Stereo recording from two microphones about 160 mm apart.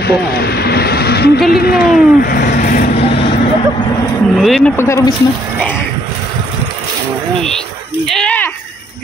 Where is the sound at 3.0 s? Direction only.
40° left (ahead or behind).